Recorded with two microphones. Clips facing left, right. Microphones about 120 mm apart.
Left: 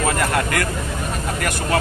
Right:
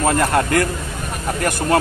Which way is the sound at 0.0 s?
35° right (ahead or behind).